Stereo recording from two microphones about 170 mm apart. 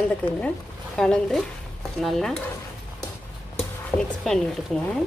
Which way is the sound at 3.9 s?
10° left (ahead or behind).